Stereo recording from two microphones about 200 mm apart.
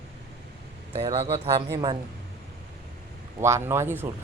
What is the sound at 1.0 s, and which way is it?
Speech, 30° right (ahead or behind).